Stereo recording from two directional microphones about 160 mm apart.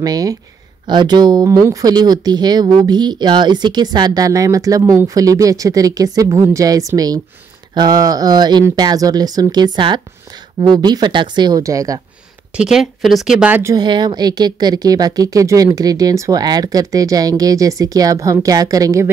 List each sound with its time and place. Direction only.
0.0 s speech: 25° right (ahead or behind)
12.5 s speech: 5° right (ahead or behind)
13.7 s speech: 25° right (ahead or behind)